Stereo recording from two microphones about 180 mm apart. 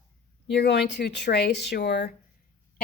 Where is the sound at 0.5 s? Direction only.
70° left (ahead or behind).